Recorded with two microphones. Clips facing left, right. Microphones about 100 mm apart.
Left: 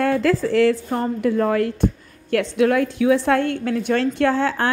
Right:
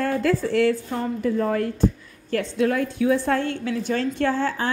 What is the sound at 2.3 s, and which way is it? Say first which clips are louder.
A woman's voice: left 4 dB; 70° left (ahead or behind).